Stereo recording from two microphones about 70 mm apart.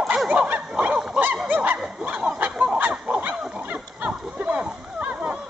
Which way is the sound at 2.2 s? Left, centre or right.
Centre.